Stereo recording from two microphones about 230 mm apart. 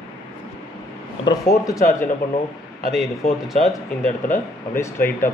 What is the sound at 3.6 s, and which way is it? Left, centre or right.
Speech, left.